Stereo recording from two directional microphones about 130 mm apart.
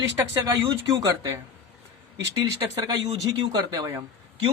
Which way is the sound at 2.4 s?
30° right (ahead or behind).